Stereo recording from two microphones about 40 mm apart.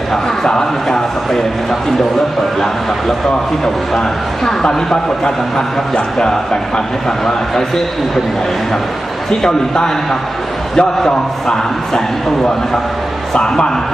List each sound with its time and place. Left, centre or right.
0.1 s a man's voice: centre
4.4 s a man's voice: centre
9.4 s a man's voice: centre
13.3 s a man's voice: left